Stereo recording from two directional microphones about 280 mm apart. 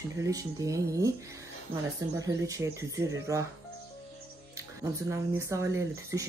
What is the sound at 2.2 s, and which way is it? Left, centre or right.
Speech, centre.